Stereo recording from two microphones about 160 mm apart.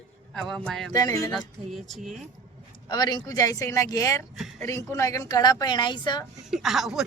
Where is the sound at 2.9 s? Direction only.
25° left (ahead or behind).